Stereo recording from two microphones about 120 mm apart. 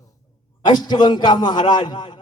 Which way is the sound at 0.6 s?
35° left (ahead or behind).